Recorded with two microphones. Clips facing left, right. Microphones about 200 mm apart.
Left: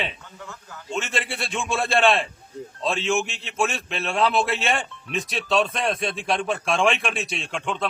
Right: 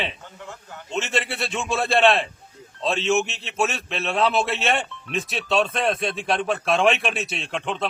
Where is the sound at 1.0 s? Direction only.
Centre (ahead or behind).